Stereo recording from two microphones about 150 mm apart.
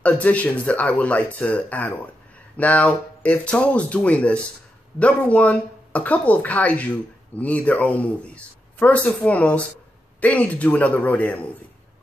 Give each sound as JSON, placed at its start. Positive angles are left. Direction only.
{"t": 0.0, "sound": "speech", "side_deg": 10}